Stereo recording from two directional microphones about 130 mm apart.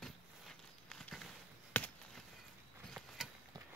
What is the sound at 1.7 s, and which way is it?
Chop, 15° left (ahead or behind).